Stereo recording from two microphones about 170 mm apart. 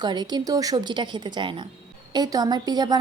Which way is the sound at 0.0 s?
25° right (ahead or behind).